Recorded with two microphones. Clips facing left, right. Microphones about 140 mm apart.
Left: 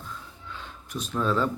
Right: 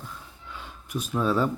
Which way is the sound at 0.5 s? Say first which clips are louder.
Right 3 dB; 10° right (ahead or behind).